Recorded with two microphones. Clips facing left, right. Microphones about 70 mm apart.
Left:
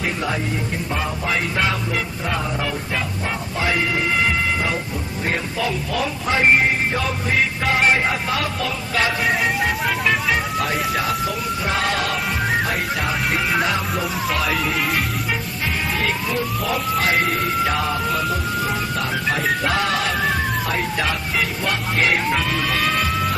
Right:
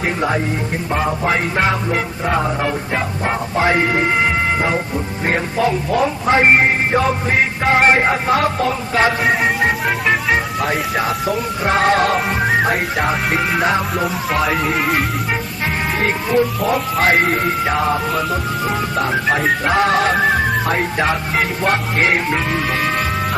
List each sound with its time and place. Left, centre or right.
0.2 s music: right
11.3 s music: right
12.4 s music: centre
12.6 s music: right
13.3 s speech: centre
16.0 s music: right
17.7 s music: right